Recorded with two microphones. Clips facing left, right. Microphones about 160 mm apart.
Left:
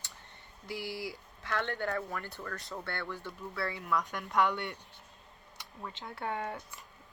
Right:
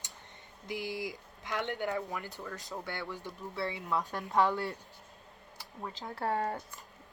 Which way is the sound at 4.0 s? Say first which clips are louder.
Right 2 dB; 35° right (ahead or behind).